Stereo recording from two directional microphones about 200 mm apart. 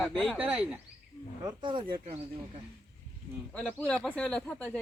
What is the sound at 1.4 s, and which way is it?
Speech, 25° right (ahead or behind).